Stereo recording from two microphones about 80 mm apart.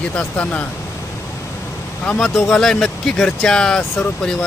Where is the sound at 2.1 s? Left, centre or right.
Centre.